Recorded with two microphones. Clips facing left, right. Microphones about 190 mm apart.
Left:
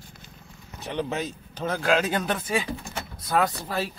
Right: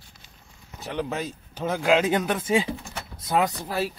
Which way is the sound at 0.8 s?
Centre (ahead or behind).